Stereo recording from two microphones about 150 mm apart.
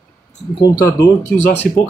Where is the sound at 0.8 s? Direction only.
20° left (ahead or behind).